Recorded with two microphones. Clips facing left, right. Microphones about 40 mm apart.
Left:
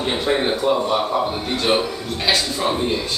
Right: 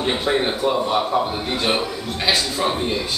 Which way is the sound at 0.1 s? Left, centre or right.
Centre.